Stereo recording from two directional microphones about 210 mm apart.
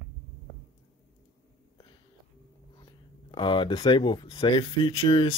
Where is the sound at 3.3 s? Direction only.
25° left (ahead or behind).